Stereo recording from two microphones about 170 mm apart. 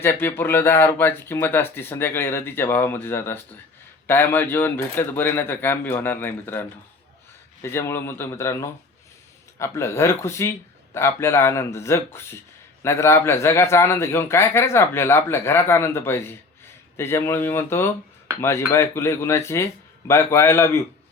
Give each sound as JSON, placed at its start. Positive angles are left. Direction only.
{"t": 0.0, "sound": "a man's voice", "side_deg": 15}